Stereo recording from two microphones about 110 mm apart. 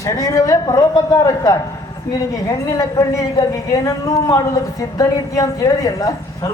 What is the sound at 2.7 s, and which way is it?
Speech, 35° left (ahead or behind).